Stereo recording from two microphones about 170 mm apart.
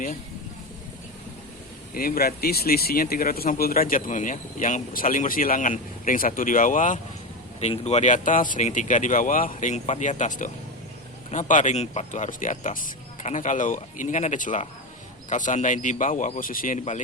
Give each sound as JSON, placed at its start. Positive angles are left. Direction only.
{"t": 1.9, "sound": "speech", "side_deg": 60}